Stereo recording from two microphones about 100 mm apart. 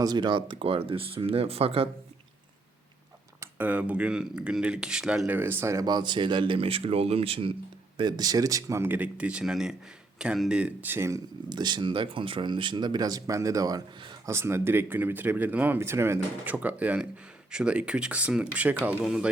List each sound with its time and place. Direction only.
0.0 s speech: 45° right (ahead or behind); by 1.9 s 75° right (ahead or behind)
3.6 s speech: 15° right (ahead or behind)
5.3 s speech: 20° right (ahead or behind)
5.8 s speech: 45° right (ahead or behind); by 7.5 s 65° right (ahead or behind)
7.9 s speech: 45° right (ahead or behind)
8.8 s speech: 15° right (ahead or behind)
10.6 s speech: 15° right (ahead or behind)
11.4 s speech: 45° right (ahead or behind)
14.3 s speech: 25° right (ahead or behind); by 19.3 s 10° right (ahead or behind)